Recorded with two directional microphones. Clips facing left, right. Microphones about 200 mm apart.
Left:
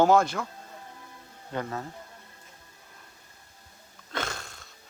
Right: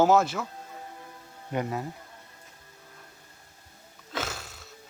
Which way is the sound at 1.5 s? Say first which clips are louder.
Right 3 dB; 15° right (ahead or behind).